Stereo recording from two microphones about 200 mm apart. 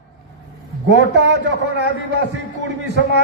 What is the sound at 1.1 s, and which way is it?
Speech, 60° right (ahead or behind).